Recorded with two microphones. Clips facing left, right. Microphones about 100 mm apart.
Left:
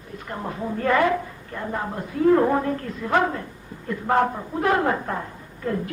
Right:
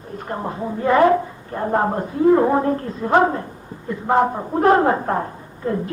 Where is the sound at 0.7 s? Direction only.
15° right (ahead or behind).